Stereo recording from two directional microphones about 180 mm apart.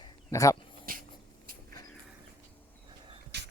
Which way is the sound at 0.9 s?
55° right (ahead or behind).